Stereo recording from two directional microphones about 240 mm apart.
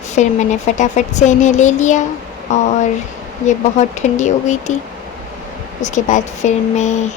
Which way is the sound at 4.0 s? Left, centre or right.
Left.